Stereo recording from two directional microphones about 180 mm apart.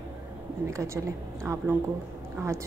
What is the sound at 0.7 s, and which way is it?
A woman's voice, 15° right (ahead or behind).